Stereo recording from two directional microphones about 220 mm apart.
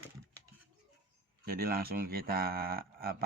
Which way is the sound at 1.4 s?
40° right (ahead or behind).